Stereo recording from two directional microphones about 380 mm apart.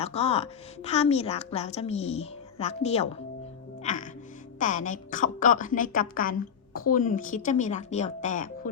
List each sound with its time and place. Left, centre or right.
0.0 s a woman's voice: centre
3.8 s music: centre
4.6 s speech: centre